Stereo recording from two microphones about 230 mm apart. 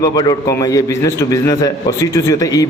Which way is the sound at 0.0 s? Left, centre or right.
Centre.